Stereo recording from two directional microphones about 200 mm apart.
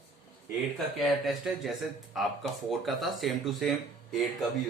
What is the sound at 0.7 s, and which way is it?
Speech, centre (ahead or behind).